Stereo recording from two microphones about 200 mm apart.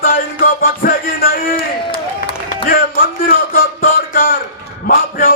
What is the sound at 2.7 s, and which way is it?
Music, 45° left (ahead or behind).